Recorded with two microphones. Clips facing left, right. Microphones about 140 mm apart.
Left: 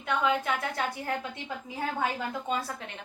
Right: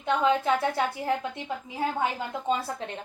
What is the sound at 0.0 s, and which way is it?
Speech, 25° right (ahead or behind).